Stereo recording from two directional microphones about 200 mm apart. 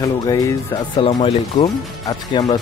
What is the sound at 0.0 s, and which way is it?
Speech, 15° left (ahead or behind).